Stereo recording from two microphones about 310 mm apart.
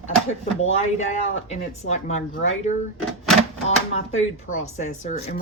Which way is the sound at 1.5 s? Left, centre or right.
Left.